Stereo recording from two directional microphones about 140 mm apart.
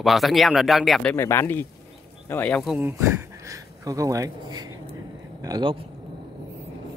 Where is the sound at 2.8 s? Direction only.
15° right (ahead or behind); by 5.9 s 40° right (ahead or behind).